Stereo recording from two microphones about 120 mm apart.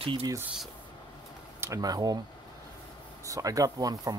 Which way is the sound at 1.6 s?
30° right (ahead or behind).